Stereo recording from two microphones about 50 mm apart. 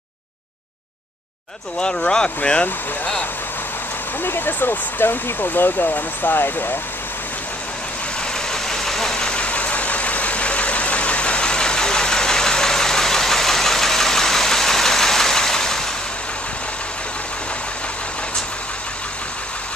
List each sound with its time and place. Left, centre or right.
1.8 s speech: centre
4.2 s speech: left
8.5 s vehicle: centre